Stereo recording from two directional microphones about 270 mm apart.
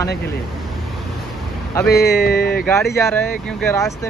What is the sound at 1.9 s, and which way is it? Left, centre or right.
Speech, left.